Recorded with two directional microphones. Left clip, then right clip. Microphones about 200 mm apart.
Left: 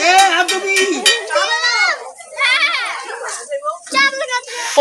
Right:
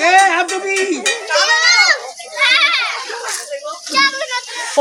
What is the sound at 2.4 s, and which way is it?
Children playing, 60° left (ahead or behind).